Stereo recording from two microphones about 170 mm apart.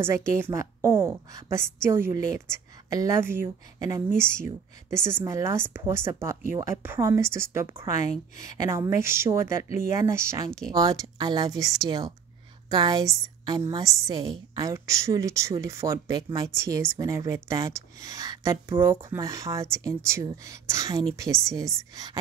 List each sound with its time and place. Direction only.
0.0 s a woman's voice: 15° right (ahead or behind)
7.9 s speech: 40° left (ahead or behind)
8.5 s a woman's voice: 20° right (ahead or behind)
9.8 s speech: 45° left (ahead or behind)
10.1 s a woman's voice: 15° right (ahead or behind)